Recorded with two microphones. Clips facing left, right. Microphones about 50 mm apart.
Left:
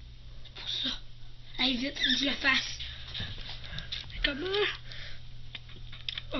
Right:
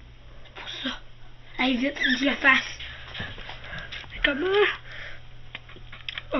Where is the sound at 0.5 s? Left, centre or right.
Right.